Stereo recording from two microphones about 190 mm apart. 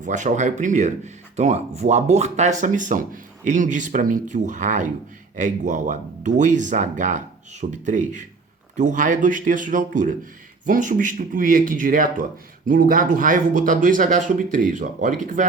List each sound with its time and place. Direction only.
0.0 s speech: 40° right (ahead or behind)